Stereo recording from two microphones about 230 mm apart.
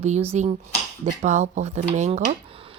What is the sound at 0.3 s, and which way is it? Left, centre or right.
Speech, right.